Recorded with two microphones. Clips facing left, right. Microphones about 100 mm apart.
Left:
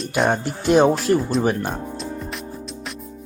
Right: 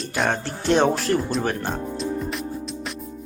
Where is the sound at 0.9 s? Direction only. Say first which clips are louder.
Left 3 dB; centre (ahead or behind).